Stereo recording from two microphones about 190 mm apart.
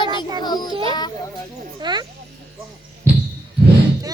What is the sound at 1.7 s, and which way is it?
Speech, 20° right (ahead or behind).